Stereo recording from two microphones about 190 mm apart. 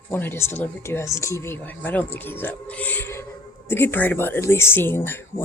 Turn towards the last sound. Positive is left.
turn(degrees=10)  # may be behind; listen again after turning